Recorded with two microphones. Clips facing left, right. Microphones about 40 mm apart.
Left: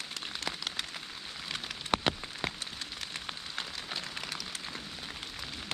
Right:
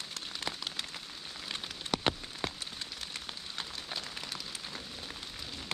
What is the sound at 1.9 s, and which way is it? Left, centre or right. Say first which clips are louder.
Rain on surface: left 2 dB; left.